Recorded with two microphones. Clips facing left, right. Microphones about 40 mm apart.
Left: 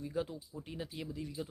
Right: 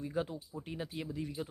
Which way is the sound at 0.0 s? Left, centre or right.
Centre.